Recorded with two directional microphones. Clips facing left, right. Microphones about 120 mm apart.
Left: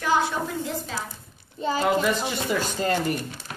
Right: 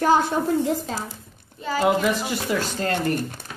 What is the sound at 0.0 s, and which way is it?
Speech, 45° right (ahead or behind).